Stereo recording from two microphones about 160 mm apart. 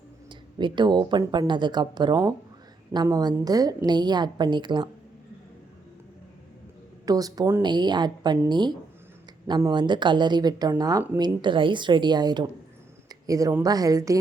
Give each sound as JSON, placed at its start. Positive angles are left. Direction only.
{"t": 0.3, "sound": "speech", "side_deg": -30}
{"t": 7.0, "sound": "speech", "side_deg": -25}